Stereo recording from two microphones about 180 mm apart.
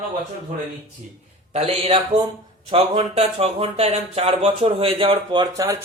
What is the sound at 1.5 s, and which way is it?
A man's voice, 30° right (ahead or behind).